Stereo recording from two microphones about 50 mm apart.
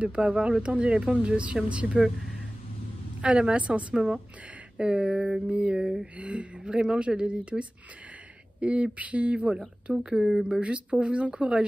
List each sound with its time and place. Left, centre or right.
0.0 s speech: right
3.2 s speech: centre
3.9 s speech: centre
4.7 s speech: right
5.0 s speech: centre
5.5 s speech: right
5.8 s speech: centre
6.1 s speech: right
9.9 s speech: centre
10.4 s speech: right